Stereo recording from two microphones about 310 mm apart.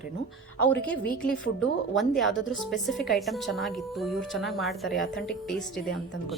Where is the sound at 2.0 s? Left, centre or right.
Centre.